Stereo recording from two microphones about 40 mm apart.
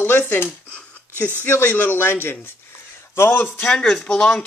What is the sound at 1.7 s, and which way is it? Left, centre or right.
Speech, left.